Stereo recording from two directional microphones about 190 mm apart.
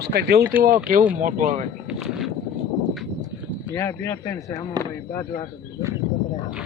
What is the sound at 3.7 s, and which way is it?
Speech, 15° left (ahead or behind).